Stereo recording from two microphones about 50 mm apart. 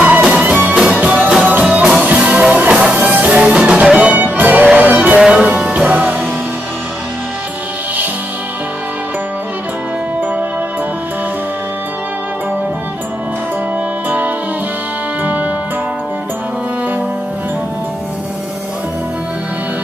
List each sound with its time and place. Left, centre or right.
0.0 s music: right
3.0 s music: right
3.3 s music: right
5.2 s music: centre
14.0 s music: right